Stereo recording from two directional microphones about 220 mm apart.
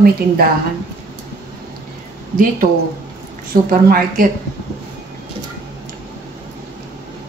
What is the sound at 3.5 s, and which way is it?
Speech, 40° right (ahead or behind).